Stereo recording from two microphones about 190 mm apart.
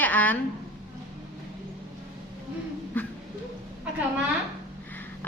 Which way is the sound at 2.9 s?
10° left (ahead or behind).